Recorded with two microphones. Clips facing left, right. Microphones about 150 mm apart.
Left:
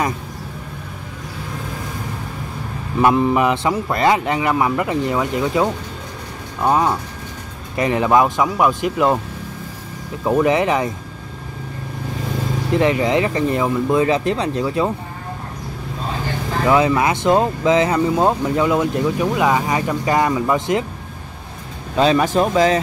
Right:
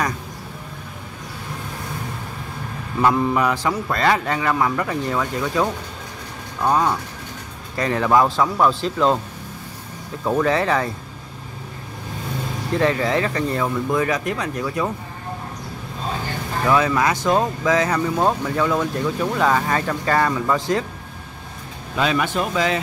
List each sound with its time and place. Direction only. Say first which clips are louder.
3.0 s a man's voice: left 3 dB; 20° left (ahead or behind)
10.2 s speech: left 3 dB; 15° left (ahead or behind)
12.7 s a man's voice: left 3 dB; 20° left (ahead or behind)
16.6 s a man's voice: left 3 dB; 20° left (ahead or behind)
21.9 s speech: left 6 dB; 30° left (ahead or behind)